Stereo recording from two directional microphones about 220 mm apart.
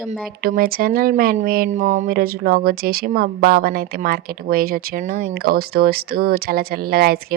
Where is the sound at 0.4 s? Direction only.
40° right (ahead or behind).